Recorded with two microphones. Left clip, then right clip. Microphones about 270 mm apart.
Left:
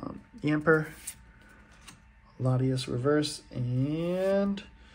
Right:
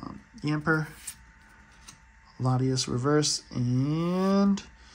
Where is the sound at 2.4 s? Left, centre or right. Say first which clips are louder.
Right 2 dB; centre.